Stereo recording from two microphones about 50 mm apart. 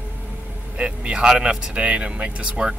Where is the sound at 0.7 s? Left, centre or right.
Centre.